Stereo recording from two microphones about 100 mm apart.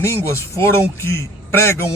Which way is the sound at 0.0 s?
25° left (ahead or behind).